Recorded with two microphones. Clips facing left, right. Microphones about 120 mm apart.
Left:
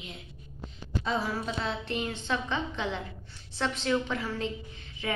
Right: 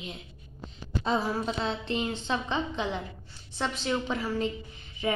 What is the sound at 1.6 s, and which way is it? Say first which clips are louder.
A woman's voice: right 2 dB; 25° right (ahead or behind).